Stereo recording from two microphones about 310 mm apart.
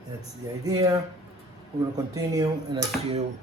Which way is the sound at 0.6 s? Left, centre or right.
Centre.